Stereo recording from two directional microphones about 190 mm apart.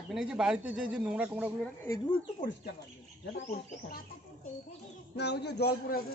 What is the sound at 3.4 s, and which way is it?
Speech, 50° left (ahead or behind).